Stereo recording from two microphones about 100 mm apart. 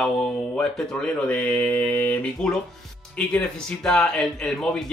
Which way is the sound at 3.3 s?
5° left (ahead or behind).